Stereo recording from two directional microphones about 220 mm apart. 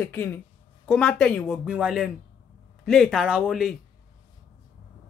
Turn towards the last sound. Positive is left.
turn(degrees=0)  # may be behind; listen again after turning